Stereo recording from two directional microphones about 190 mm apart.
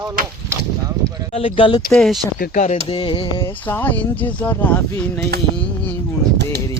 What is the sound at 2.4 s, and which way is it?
Speech, 40° left (ahead or behind).